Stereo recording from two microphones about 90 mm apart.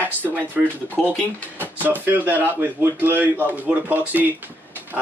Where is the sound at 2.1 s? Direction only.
20° right (ahead or behind).